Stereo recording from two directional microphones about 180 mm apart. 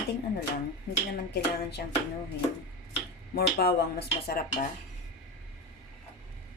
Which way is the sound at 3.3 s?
60° left (ahead or behind).